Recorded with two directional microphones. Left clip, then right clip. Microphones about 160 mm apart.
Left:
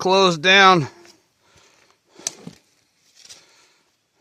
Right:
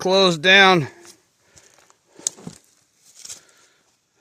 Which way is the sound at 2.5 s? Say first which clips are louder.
Right 2 dB; 90° right.